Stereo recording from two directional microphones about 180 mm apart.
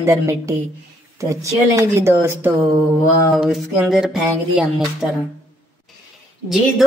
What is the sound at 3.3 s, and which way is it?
Speech, centre (ahead or behind).